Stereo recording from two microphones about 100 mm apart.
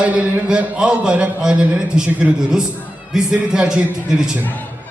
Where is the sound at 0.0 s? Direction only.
10° right (ahead or behind).